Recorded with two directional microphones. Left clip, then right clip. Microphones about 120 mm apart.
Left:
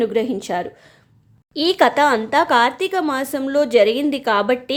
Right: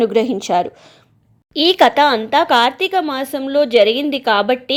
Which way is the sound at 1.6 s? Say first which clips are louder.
Right 4 dB; 15° right (ahead or behind).